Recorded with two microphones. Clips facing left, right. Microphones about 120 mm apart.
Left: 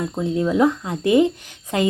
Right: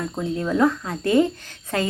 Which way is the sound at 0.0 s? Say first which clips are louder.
Left 4 dB; 20° left (ahead or behind).